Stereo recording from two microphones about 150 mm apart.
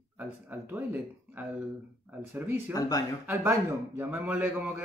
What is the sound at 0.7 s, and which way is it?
Speech, 10° right (ahead or behind).